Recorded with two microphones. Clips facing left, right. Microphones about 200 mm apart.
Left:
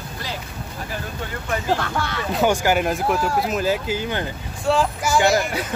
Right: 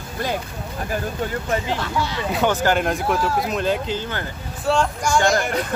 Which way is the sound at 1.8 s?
55° left (ahead or behind).